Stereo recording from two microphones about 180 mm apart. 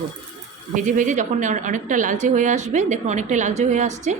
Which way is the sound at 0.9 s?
45° right (ahead or behind).